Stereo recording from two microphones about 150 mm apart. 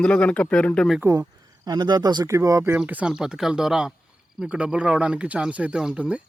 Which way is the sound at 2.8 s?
5° right (ahead or behind).